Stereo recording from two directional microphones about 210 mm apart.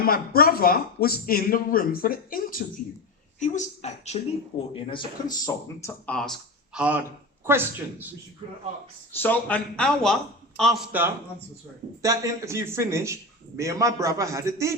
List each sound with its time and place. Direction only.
0.0 s a man's voice: 45° left (ahead or behind); by 8.1 s 10° right (ahead or behind)
8.4 s a man's voice: 25° right (ahead or behind)
9.1 s a man's voice: 10° left (ahead or behind); by 14.8 s 15° right (ahead or behind)